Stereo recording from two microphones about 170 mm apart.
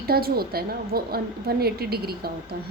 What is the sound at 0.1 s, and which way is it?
A woman's voice, 65° right (ahead or behind).